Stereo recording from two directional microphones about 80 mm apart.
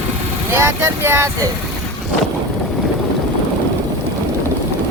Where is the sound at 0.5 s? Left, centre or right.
Right.